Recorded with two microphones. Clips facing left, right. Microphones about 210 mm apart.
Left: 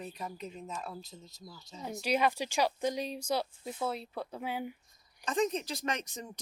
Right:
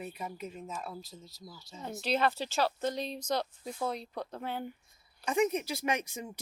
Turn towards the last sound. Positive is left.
turn(degrees=-10)  # may be behind; listen again after turning